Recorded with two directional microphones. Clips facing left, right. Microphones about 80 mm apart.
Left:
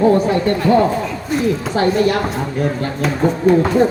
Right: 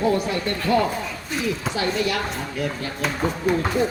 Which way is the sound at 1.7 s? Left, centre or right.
Left.